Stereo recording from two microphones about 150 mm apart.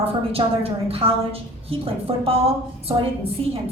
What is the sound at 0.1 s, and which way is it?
A woman's voice, 40° right (ahead or behind).